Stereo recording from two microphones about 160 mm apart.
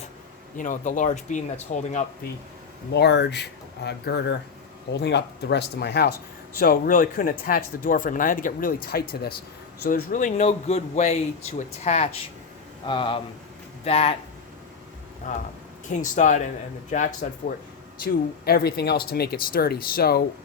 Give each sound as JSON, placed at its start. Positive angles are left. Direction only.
{"t": 0.5, "sound": "speech", "side_deg": 55}
{"t": 2.9, "sound": "speech", "side_deg": 90}
{"t": 6.6, "sound": "speech", "side_deg": 65}
{"t": 9.8, "sound": "speech", "side_deg": 55}
{"t": 12.8, "sound": "speech", "side_deg": 30}
{"t": 15.9, "sound": "speech", "side_deg": 50}
{"t": 18.0, "sound": "speech", "side_deg": 75}